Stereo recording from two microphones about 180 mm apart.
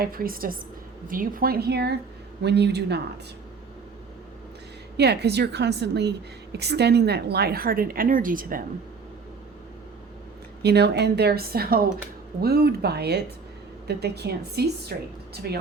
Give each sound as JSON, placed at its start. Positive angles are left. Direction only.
{"t": 0.0, "sound": "a woman's voice", "side_deg": -55}
{"t": 4.9, "sound": "a woman's voice", "side_deg": -65}
{"t": 10.6, "sound": "a woman's voice", "side_deg": -65}